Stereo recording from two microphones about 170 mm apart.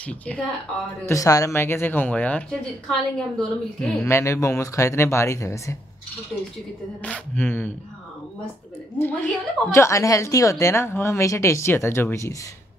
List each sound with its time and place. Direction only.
0.0 s a woman's voice: 5° left (ahead or behind)
1.0 s a woman's voice: 20° left (ahead or behind); by 4.1 s centre (ahead or behind)
4.1 s a woman's voice: 15° left (ahead or behind)
7.0 s a woman's voice: 10° left (ahead or behind)
8.9 s a woman's voice: 15° left (ahead or behind)